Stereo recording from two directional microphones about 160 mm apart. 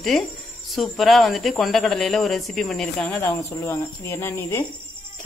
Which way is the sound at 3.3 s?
15° left (ahead or behind).